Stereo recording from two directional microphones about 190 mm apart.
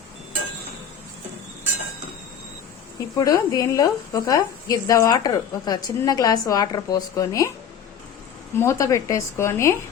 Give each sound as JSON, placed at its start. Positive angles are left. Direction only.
{"t": 3.2, "sound": "a woman's voice", "side_deg": 15}
{"t": 8.5, "sound": "a woman's voice", "side_deg": 15}